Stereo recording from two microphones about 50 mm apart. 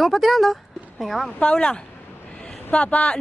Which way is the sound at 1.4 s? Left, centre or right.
Centre.